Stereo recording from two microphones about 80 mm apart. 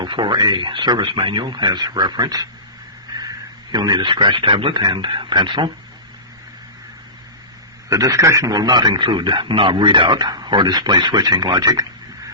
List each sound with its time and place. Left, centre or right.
0.0 s speech: right
7.9 s a man's voice: right
8.5 s speech: right